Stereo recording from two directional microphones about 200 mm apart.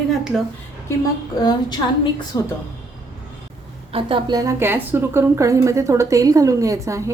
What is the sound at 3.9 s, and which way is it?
A woman's voice, 25° right (ahead or behind).